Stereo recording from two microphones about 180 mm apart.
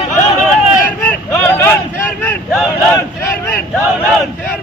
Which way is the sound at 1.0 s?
10° left (ahead or behind).